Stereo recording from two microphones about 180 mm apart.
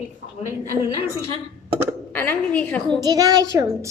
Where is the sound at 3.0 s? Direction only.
20° right (ahead or behind).